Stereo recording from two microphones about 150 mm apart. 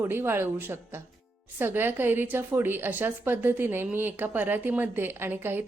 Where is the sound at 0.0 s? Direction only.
15° right (ahead or behind).